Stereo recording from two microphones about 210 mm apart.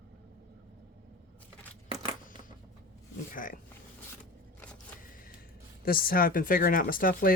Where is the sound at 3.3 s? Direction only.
40° left (ahead or behind).